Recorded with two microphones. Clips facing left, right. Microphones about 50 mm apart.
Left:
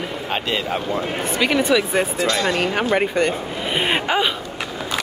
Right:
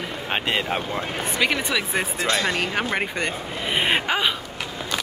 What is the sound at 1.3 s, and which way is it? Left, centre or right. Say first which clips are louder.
Speech: left 6 dB; centre.